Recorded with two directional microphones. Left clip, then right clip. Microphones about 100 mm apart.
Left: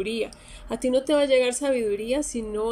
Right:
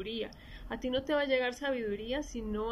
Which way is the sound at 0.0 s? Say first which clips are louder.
Left 10 dB; 35° left (ahead or behind).